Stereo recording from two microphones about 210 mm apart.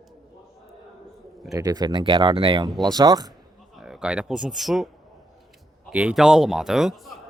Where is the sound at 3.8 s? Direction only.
Centre (ahead or behind).